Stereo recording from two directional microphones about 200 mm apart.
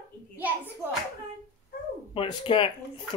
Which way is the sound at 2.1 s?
25° left (ahead or behind).